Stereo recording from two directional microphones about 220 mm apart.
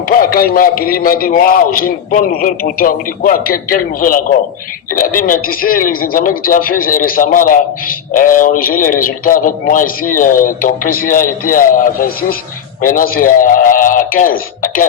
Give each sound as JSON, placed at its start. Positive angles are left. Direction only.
{"t": 0.1, "sound": "speech", "side_deg": 40}